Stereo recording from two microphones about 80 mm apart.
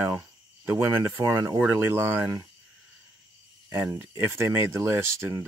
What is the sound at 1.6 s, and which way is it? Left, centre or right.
Speech, right.